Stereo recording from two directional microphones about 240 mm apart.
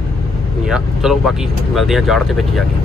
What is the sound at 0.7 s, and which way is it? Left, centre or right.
Speech, centre.